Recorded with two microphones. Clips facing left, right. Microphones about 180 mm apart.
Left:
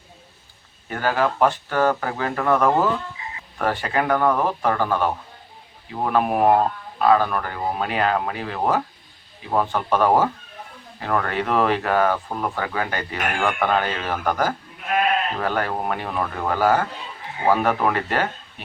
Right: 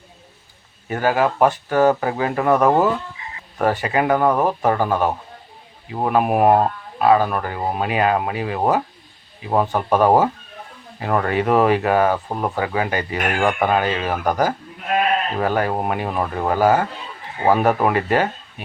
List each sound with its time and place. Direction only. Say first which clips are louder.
0.9 s speech: right 3 dB; 15° right (ahead or behind)